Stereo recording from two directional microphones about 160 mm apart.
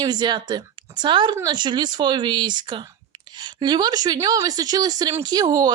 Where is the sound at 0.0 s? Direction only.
25° right (ahead or behind).